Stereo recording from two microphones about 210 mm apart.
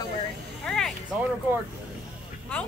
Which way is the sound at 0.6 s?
Centre (ahead or behind).